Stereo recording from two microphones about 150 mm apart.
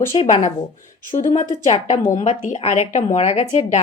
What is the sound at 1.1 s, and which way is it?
Speech, 55° left (ahead or behind).